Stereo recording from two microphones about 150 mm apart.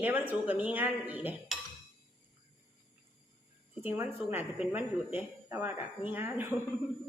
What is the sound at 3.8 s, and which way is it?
A man's voice, 15° right (ahead or behind).